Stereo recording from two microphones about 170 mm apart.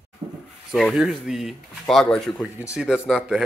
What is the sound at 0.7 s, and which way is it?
Speech, centre (ahead or behind).